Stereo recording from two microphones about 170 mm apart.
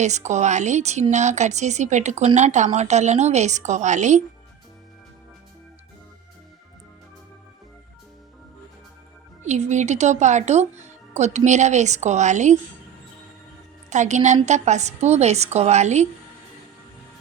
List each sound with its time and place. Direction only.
0.0 s speech: 45° right (ahead or behind)
9.4 s speech: 45° right (ahead or behind)
13.9 s a woman's voice: 45° right (ahead or behind)